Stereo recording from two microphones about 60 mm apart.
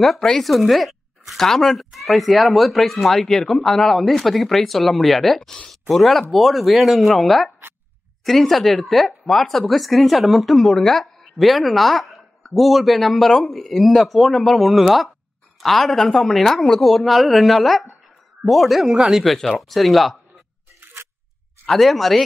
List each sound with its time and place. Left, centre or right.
0.0 s speech: centre
20.8 s a sound: right
21.6 s speech: centre